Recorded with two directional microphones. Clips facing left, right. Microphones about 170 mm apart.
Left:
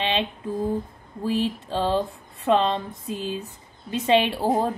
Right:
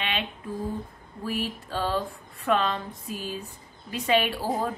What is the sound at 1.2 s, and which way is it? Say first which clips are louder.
A woman's voice: left 6 dB; 25° left (ahead or behind).